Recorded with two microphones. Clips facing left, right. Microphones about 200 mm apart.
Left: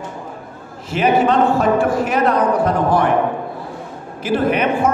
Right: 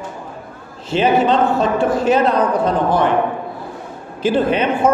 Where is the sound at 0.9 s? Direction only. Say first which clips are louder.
Right 1 dB; 25° right (ahead or behind).